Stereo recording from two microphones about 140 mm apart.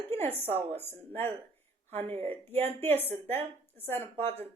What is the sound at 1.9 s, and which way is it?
Speech, 50° right (ahead or behind).